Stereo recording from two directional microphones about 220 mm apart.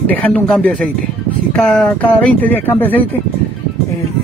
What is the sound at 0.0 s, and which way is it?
Speech, 5° left (ahead or behind).